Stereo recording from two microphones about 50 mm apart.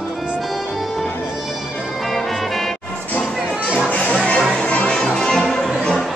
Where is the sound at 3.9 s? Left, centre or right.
Left.